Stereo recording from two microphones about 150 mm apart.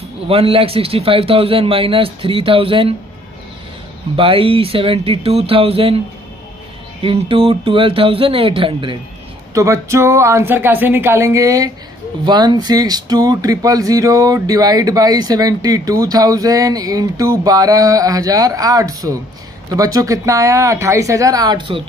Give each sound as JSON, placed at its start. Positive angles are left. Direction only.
{"t": 0.3, "sound": "a man's voice", "side_deg": -40}
{"t": 4.2, "sound": "a man's voice", "side_deg": -35}
{"t": 7.0, "sound": "a man's voice", "side_deg": -35}
{"t": 9.5, "sound": "speech", "side_deg": -20}